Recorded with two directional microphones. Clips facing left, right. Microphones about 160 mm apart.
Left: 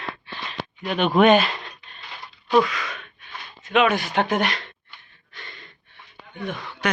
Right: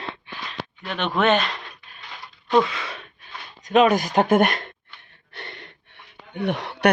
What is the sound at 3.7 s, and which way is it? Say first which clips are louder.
Speech: right 3 dB; 40° right (ahead or behind).